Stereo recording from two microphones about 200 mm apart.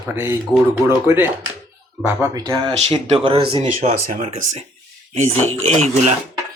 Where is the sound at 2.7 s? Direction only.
30° right (ahead or behind).